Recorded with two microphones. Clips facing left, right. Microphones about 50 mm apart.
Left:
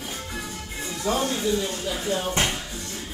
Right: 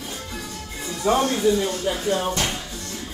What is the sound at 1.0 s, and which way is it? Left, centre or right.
Speech, right.